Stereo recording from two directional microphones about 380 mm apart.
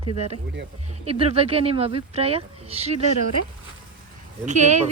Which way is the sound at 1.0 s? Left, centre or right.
Centre.